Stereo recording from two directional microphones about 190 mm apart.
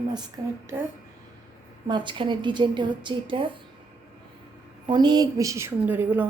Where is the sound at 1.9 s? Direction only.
25° right (ahead or behind).